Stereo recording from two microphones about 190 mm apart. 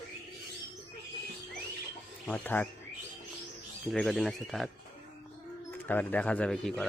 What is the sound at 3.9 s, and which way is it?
Speech, centre (ahead or behind).